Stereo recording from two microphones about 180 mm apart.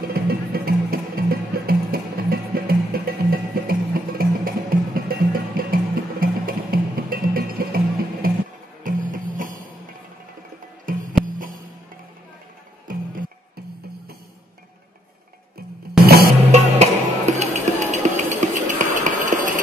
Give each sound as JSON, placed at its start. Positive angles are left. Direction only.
{"t": 0.1, "sound": "music", "side_deg": -55}
{"t": 10.9, "sound": "music", "side_deg": -50}
{"t": 12.9, "sound": "music", "side_deg": -50}
{"t": 16.5, "sound": "music", "side_deg": -40}